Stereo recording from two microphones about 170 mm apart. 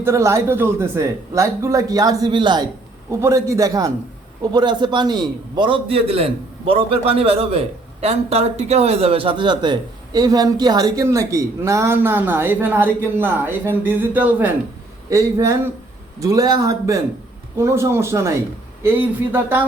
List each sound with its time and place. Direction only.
0.0 s a man's voice: 15° right (ahead or behind)